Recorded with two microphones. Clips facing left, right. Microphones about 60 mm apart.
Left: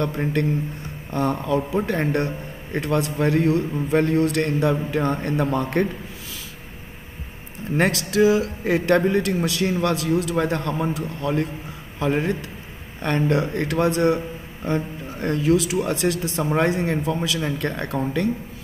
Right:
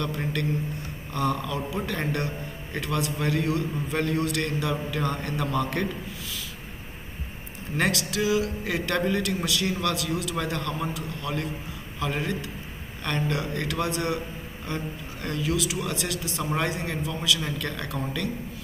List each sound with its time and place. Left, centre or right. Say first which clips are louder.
0.0 s a man's voice: left 6 dB; left
7.7 s a man's voice: left 6 dB; left